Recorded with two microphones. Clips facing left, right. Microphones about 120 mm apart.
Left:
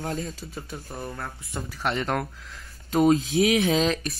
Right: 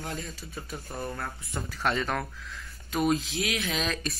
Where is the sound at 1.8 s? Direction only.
10° left (ahead or behind).